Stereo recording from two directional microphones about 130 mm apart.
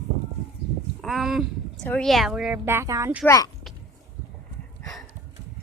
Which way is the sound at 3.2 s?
25° left (ahead or behind).